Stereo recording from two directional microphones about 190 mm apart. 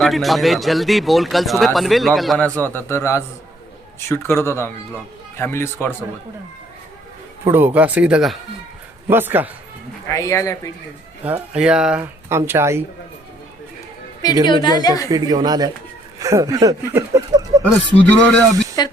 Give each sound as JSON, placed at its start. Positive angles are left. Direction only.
{"t": 0.0, "sound": "speech", "side_deg": 0}
{"t": 7.4, "sound": "speech", "side_deg": -10}
{"t": 10.1, "sound": "speech", "side_deg": 15}
{"t": 11.3, "sound": "speech", "side_deg": -5}
{"t": 14.4, "sound": "a woman's voice", "side_deg": 25}
{"t": 15.1, "sound": "speech", "side_deg": -20}
{"t": 18.0, "sound": "speech", "side_deg": 5}
{"t": 18.8, "sound": "a woman's voice", "side_deg": 20}